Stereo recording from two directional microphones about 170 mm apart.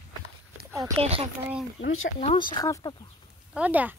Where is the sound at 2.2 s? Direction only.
30° left (ahead or behind).